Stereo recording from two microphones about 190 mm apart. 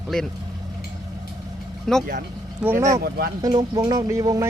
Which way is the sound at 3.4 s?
20° right (ahead or behind).